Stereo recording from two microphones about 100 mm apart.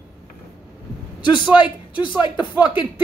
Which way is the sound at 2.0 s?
50° left (ahead or behind).